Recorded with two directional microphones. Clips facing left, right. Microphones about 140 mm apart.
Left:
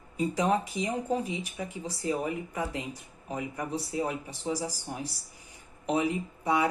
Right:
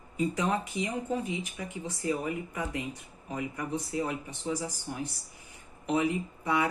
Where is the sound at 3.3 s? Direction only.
25° left (ahead or behind).